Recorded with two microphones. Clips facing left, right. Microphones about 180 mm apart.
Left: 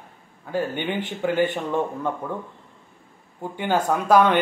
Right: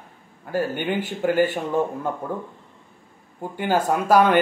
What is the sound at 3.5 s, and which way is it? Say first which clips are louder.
Speech: right 1 dB; 5° right (ahead or behind).